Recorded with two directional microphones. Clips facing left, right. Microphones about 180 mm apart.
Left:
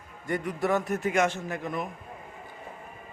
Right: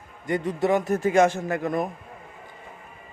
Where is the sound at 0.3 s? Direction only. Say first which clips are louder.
Right 4 dB; 20° right (ahead or behind).